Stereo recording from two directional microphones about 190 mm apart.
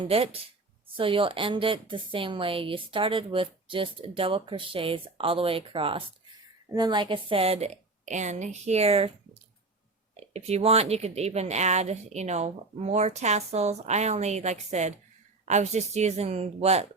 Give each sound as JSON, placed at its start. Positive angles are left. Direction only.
{"t": 0.0, "sound": "a woman's voice", "side_deg": -30}